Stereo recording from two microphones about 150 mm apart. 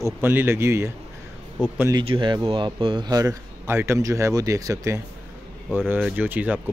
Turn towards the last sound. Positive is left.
turn(degrees=-10)  # may be behind; listen again after turning